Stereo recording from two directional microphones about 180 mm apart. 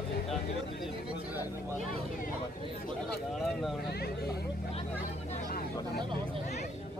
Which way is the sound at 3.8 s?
60° left (ahead or behind).